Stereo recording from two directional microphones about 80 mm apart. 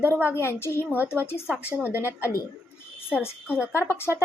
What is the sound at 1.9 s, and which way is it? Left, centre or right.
Speech, right.